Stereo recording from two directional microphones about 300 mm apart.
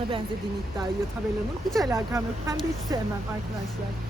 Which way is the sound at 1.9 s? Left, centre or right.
Centre.